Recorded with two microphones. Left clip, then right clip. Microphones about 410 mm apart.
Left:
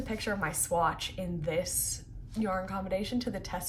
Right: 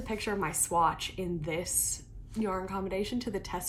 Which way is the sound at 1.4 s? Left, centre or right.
Left.